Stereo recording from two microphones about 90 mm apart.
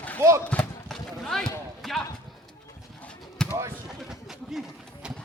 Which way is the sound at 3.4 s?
10° left (ahead or behind).